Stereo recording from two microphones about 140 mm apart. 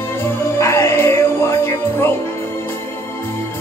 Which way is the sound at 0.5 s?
20° left (ahead or behind).